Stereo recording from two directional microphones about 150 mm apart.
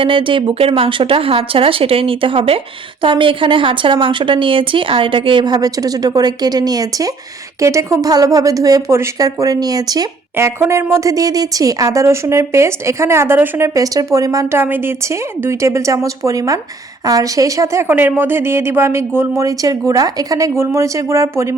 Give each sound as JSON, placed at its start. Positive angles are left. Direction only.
{"t": 0.0, "sound": "a woman's voice", "side_deg": -35}